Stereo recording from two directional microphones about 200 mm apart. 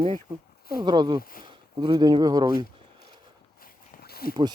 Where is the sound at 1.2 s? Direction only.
45° left (ahead or behind).